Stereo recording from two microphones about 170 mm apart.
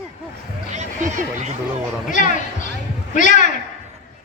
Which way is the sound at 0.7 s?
45° right (ahead or behind).